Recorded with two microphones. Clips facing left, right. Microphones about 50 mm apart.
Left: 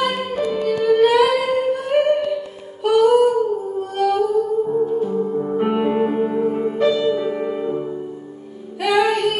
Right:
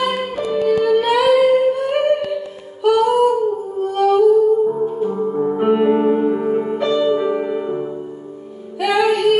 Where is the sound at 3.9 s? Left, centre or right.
Centre.